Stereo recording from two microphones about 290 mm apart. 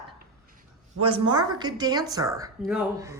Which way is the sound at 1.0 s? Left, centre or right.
Centre.